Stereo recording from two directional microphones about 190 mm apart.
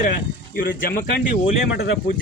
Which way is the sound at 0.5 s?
50° left (ahead or behind).